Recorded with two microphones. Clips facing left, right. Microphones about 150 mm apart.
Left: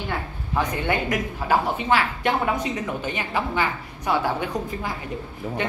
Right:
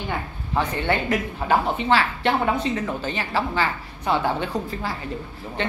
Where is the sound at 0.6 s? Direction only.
15° left (ahead or behind).